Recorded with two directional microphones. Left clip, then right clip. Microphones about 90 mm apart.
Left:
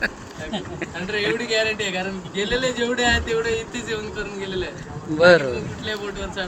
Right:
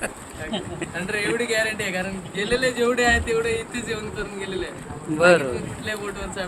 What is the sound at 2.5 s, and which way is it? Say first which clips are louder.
Speech: right 2 dB; 55° right (ahead or behind).